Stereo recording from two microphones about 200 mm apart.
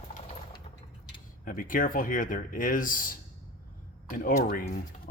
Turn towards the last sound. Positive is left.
turn(degrees=45)  # may be behind; listen again after turning